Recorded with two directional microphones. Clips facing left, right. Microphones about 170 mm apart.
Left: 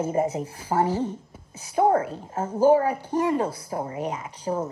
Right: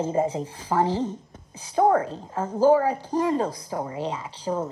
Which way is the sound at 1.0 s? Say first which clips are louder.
Even; 10° left (ahead or behind).